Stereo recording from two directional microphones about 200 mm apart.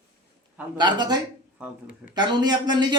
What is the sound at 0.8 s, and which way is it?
Speech, 20° right (ahead or behind).